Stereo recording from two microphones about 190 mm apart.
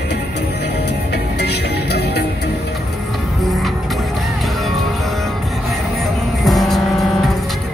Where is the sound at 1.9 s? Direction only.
60° left (ahead or behind).